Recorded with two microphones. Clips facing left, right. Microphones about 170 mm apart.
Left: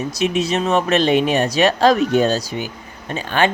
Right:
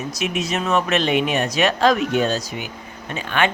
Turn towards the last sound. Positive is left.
turn(degrees=35)  # may be behind; listen again after turning